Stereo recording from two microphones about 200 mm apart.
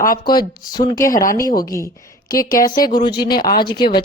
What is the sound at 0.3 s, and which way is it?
A woman's voice, 20° left (ahead or behind).